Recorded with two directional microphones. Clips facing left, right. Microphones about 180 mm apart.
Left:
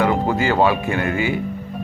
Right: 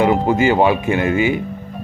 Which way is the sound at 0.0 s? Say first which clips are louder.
Right 4 dB; 20° right (ahead or behind).